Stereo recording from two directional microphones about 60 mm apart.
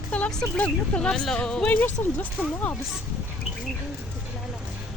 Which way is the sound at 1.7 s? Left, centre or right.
Left.